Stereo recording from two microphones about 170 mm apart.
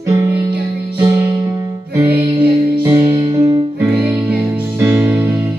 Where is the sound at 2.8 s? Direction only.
20° right (ahead or behind).